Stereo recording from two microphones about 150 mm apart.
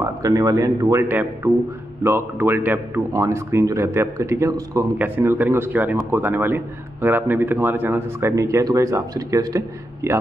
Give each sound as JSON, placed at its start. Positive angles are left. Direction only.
{"t": 0.0, "sound": "a man's voice", "side_deg": -20}